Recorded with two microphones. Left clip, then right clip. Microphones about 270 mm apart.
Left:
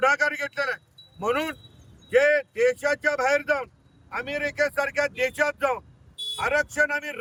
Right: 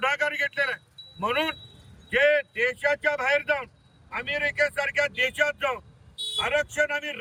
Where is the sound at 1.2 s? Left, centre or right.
Centre.